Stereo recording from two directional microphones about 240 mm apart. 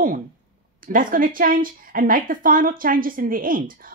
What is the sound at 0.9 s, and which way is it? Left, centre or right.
A woman's voice, right.